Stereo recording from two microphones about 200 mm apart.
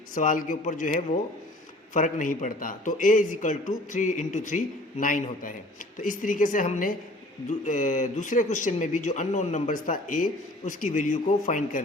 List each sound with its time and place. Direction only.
0.1 s speech: 40° left (ahead or behind)